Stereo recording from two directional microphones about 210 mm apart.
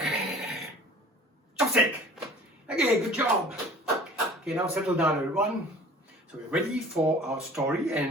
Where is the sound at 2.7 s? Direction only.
5° right (ahead or behind).